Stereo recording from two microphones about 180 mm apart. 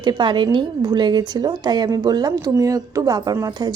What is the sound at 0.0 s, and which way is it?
A woman's voice, 25° right (ahead or behind).